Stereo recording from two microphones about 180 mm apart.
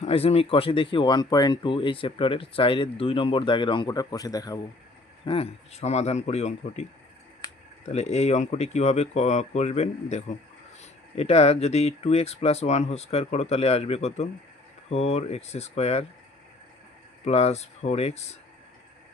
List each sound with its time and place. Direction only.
0.0 s speech: 35° left (ahead or behind)
5.2 s speech: 30° left (ahead or behind)
7.9 s speech: 40° left (ahead or behind)
17.2 s speech: 35° left (ahead or behind)